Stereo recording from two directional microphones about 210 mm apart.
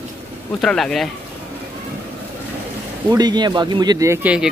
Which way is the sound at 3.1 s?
20° right (ahead or behind).